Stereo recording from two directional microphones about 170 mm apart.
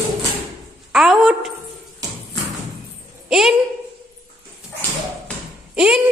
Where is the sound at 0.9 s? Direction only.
5° right (ahead or behind).